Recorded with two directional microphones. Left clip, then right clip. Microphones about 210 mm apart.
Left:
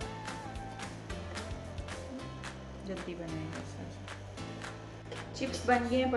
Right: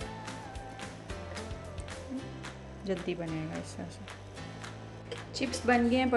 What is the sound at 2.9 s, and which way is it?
Speech, 50° right (ahead or behind).